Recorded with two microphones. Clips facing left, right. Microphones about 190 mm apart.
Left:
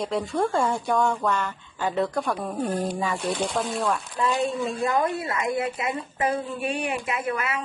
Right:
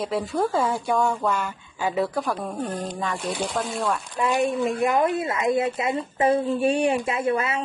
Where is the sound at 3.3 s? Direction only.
10° right (ahead or behind); by 7.6 s 25° right (ahead or behind).